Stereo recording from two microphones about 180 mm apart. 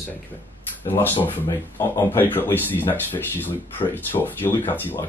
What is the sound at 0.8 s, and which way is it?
Speech, 10° left (ahead or behind).